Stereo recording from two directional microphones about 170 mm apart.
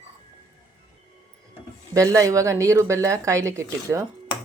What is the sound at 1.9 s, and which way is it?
Speech, 20° right (ahead or behind).